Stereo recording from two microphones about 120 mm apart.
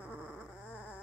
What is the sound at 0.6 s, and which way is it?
Dog, 15° left (ahead or behind).